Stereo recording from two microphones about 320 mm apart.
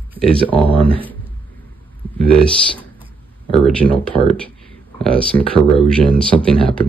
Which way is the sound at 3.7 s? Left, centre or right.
Centre.